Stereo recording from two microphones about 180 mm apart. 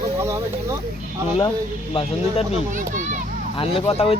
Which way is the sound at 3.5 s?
30° left (ahead or behind).